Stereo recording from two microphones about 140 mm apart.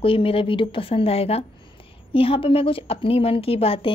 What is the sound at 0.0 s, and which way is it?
A woman's voice, 40° left (ahead or behind).